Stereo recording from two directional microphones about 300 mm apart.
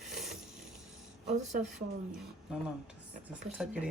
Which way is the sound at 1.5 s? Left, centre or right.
Right.